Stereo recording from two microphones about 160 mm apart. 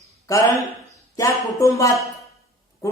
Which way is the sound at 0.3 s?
20° left (ahead or behind).